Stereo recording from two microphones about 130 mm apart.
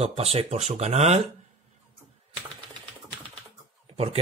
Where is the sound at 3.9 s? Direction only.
50° right (ahead or behind).